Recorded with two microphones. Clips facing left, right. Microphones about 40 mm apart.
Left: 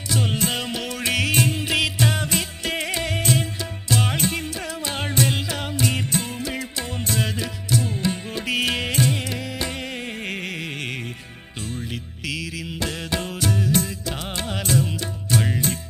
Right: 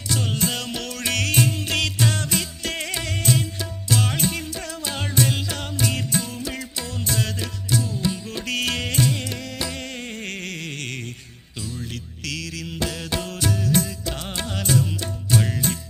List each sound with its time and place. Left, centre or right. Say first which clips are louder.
0.5 s music: left 2 dB; centre
5.2 s music: even; centre
7.2 s music: left 2 dB; centre
7.8 s music: left 1 dB; left
8.3 s music: left 2 dB; centre
11.6 s music: left 1 dB; left
11.9 s music: left 2 dB; centre